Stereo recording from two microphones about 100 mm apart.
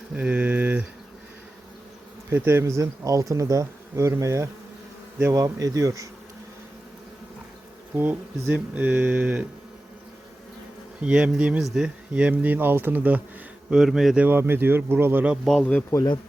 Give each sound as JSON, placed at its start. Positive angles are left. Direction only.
{"t": 0.1, "sound": "a sound", "side_deg": -10}
{"t": 2.3, "sound": "speech", "side_deg": -25}
{"t": 7.9, "sound": "speech", "side_deg": -20}
{"t": 11.0, "sound": "speech", "side_deg": -10}
{"t": 13.7, "sound": "speech", "side_deg": -5}
{"t": 14.3, "sound": "speech", "side_deg": -20}
{"t": 15.4, "sound": "speech", "side_deg": 5}